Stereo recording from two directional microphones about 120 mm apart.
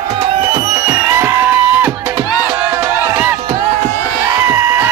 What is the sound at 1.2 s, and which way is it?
Music, 15° right (ahead or behind).